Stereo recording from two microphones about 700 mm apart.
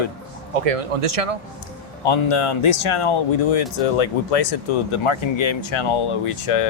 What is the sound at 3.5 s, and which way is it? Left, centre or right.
Speech, left.